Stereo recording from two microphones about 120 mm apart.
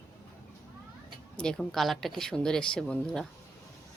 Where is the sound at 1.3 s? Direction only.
5° left (ahead or behind).